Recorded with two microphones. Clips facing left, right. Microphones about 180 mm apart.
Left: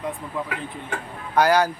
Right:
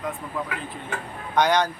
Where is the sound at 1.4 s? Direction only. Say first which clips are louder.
Left 2 dB; 5° left (ahead or behind).